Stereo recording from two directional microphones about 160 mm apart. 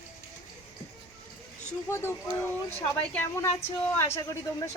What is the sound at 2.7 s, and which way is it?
Speech, 15° left (ahead or behind).